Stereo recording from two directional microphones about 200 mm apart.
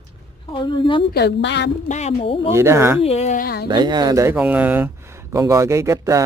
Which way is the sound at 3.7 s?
20° right (ahead or behind).